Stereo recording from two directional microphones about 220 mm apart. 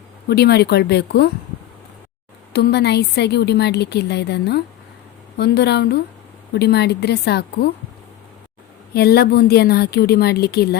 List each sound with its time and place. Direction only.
0.3 s a woman's voice: 45° left (ahead or behind)
2.5 s a woman's voice: 45° left (ahead or behind)
8.9 s a woman's voice: 45° left (ahead or behind)